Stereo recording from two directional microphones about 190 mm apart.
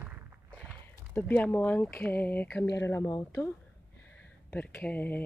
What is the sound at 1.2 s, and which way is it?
Speech, 10° left (ahead or behind).